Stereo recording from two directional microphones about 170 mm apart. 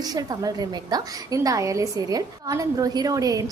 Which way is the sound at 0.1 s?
20° right (ahead or behind).